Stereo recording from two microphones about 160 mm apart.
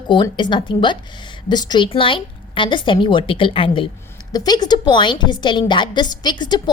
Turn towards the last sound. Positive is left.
turn(degrees=25)  # may be behind; listen again after turning